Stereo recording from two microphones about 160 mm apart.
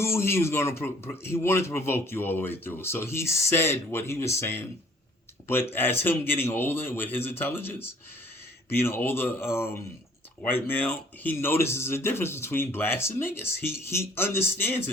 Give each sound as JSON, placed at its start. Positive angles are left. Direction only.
{"t": 0.0, "sound": "speech", "side_deg": 15}
{"t": 5.7, "sound": "speech", "side_deg": 15}